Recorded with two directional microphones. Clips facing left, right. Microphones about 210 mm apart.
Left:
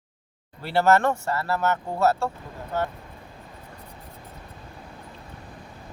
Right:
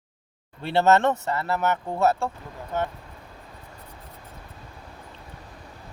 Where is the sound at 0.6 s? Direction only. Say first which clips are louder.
Right 1 dB; 20° right (ahead or behind).